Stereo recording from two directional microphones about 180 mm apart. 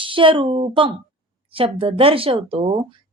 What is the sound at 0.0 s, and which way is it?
Speech, 30° right (ahead or behind).